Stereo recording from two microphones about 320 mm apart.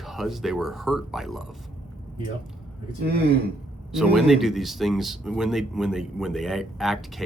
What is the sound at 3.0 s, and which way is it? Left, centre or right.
Speech, right.